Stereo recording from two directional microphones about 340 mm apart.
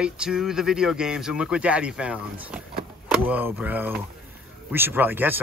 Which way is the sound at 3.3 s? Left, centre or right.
Centre.